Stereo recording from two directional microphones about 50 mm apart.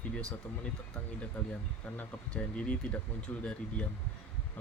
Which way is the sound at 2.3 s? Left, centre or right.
Left.